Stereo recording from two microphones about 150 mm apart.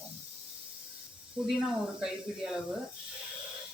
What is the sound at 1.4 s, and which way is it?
Speech, 5° right (ahead or behind).